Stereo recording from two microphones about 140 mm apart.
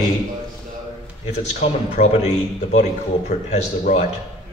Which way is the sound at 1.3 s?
50° left (ahead or behind).